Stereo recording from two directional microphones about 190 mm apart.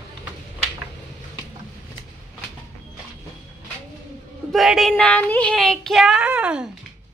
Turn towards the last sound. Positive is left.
turn(degrees=-5)  # may be behind; listen again after turning